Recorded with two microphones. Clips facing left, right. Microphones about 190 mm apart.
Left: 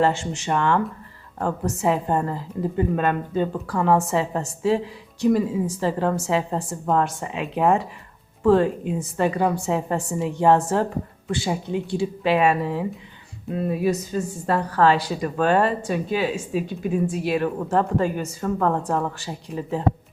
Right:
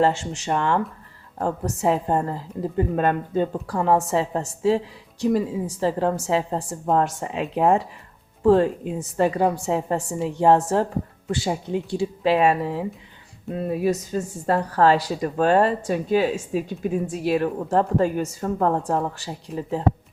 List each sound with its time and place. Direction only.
0.0 s speech: 35° right (ahead or behind)
3.7 s a woman's voice: 30° right (ahead or behind)
13.5 s speech: centre (ahead or behind)
13.8 s speech: 40° right (ahead or behind)
18.4 s a woman's voice: 30° right (ahead or behind)